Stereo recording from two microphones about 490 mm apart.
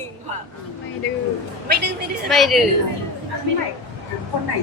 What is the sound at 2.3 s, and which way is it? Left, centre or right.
Speech, centre.